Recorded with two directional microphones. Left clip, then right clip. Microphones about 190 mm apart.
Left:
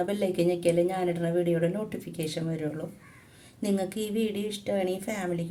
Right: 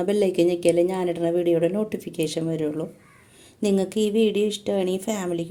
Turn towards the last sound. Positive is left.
turn(degrees=-35)  # may be behind; listen again after turning